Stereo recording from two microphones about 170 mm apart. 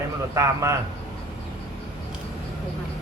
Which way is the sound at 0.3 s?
15° right (ahead or behind).